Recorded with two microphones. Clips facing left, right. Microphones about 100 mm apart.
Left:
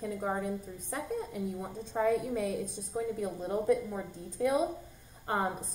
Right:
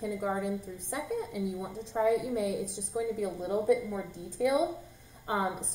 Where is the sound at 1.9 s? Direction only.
65° right (ahead or behind).